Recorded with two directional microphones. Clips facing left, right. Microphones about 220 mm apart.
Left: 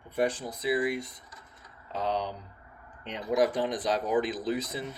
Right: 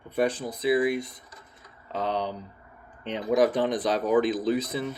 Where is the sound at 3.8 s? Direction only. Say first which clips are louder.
Right 4 dB; 60° right (ahead or behind).